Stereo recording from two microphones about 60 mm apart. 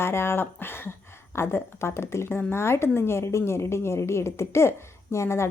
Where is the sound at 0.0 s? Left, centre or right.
Left.